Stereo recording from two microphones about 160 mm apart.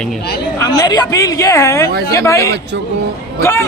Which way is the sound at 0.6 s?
25° left (ahead or behind).